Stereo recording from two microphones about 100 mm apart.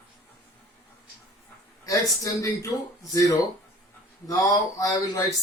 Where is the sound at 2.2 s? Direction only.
35° left (ahead or behind).